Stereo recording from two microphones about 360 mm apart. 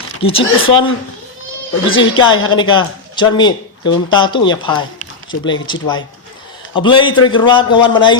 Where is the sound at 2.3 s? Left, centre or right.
Left.